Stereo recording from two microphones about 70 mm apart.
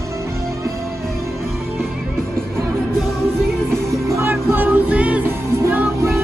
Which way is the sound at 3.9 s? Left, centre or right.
Right.